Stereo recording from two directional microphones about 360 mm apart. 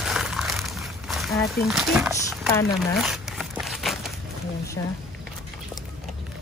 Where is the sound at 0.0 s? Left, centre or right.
Centre.